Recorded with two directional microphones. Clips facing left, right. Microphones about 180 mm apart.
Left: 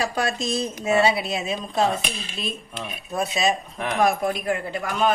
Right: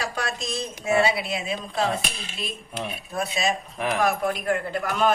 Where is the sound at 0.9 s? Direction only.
25° left (ahead or behind).